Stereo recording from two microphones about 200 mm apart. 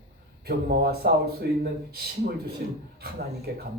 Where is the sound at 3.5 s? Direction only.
55° right (ahead or behind).